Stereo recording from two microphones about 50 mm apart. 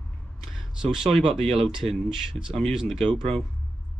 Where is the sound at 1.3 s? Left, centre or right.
Centre.